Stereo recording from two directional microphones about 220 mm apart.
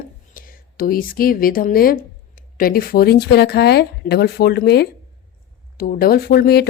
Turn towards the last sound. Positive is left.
turn(degrees=45)  # may be behind; listen again after turning